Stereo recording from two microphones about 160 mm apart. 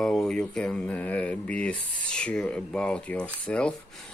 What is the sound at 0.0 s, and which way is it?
Speech, 5° left (ahead or behind).